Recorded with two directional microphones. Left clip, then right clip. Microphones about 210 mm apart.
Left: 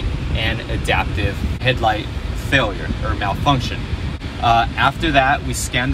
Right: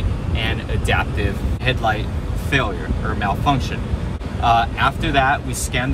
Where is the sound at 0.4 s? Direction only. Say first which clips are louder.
Left 2 dB; 10° right (ahead or behind).